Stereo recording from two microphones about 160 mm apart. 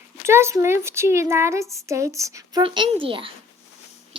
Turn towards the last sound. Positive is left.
turn(degrees=-35)  # may be behind; listen again after turning